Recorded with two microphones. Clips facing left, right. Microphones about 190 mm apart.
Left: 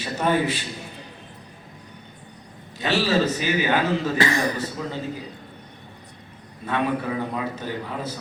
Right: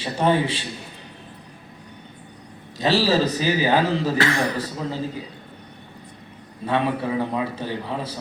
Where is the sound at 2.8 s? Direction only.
35° right (ahead or behind).